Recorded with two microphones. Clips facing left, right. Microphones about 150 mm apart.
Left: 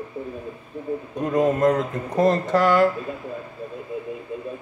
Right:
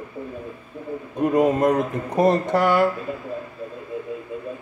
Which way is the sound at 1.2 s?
15° right (ahead or behind).